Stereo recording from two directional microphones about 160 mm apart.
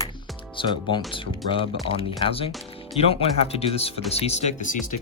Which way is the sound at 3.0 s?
40° left (ahead or behind).